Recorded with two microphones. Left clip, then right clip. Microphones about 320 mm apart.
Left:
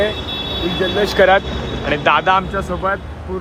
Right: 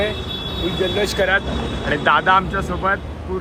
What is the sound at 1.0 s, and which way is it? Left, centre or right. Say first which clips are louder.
Speech: left 8 dB; left.